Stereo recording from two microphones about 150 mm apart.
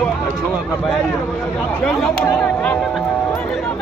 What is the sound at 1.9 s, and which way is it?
Speech, centre (ahead or behind).